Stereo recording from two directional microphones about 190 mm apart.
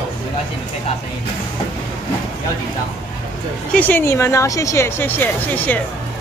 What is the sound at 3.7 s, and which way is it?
Speech, 10° left (ahead or behind).